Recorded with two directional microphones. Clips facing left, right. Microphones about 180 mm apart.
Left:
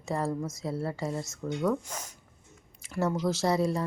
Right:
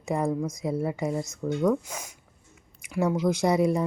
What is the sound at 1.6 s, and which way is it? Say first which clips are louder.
A woman's voice: right 4 dB; 5° right (ahead or behind).